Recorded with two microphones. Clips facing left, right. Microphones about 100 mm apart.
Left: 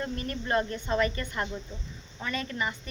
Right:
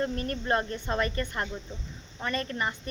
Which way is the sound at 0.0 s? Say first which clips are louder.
Right 3 dB; 40° right (ahead or behind).